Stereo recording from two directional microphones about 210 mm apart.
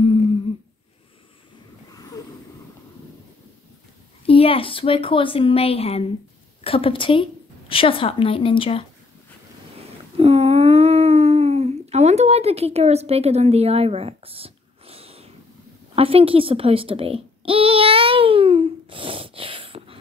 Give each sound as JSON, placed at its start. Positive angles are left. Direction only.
{"t": 4.3, "sound": "a woman's voice", "side_deg": 25}
{"t": 10.1, "sound": "a sound", "side_deg": -30}
{"t": 15.9, "sound": "babbling", "side_deg": -25}